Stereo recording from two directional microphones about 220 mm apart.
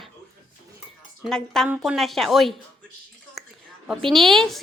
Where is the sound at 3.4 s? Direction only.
Centre (ahead or behind).